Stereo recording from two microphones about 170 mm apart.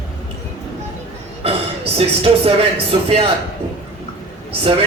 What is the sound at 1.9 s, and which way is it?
A woman's voice, 35° right (ahead or behind).